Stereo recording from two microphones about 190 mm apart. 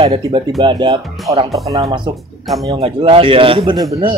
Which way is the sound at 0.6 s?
25° right (ahead or behind).